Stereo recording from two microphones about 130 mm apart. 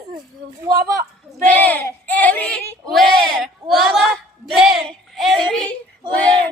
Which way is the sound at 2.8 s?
5° left (ahead or behind).